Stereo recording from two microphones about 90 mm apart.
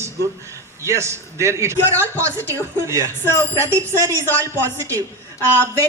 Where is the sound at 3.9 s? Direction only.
35° right (ahead or behind).